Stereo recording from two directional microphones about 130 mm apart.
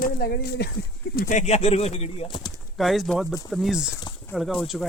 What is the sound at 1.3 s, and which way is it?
Speech, 60° left (ahead or behind).